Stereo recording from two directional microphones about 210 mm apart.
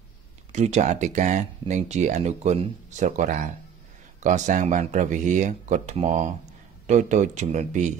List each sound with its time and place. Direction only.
0.5 s speech: 35° right (ahead or behind)